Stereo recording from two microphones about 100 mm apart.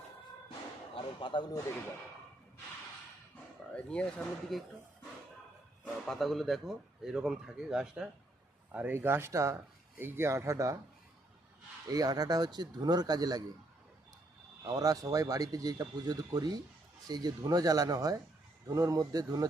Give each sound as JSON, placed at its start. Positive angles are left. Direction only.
{"t": 0.9, "sound": "speech", "side_deg": 55}
{"t": 3.8, "sound": "speech", "side_deg": 10}
{"t": 5.8, "sound": "speech", "side_deg": 5}
{"t": 8.7, "sound": "speech", "side_deg": -20}
{"t": 11.9, "sound": "speech", "side_deg": -40}
{"t": 14.6, "sound": "speech", "side_deg": -40}